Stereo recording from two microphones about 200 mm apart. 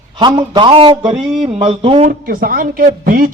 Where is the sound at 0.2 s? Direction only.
25° right (ahead or behind).